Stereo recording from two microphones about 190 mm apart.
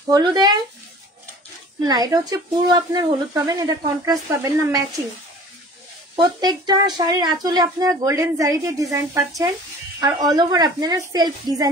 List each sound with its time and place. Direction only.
0.1 s speech: 20° right (ahead or behind)
1.9 s speech: 20° right (ahead or behind)
6.1 s speech: 20° right (ahead or behind)